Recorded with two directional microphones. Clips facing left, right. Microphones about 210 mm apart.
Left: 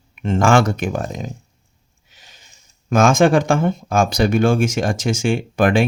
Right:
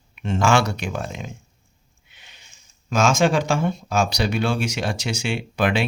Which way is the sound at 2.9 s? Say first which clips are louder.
Left 5 dB; 55° left (ahead or behind).